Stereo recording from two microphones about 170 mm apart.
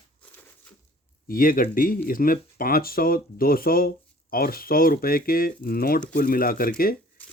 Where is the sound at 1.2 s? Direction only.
55° left (ahead or behind).